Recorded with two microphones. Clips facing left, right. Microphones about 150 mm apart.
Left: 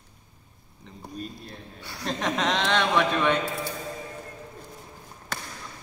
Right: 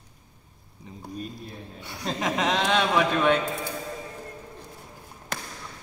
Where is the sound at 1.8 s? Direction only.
20° right (ahead or behind).